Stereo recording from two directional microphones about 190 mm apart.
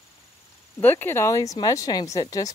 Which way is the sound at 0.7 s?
10° left (ahead or behind).